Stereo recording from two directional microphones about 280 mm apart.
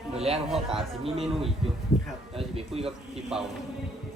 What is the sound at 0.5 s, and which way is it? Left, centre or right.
Speech, centre.